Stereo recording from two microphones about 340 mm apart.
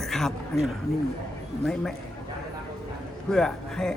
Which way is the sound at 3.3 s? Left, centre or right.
Centre.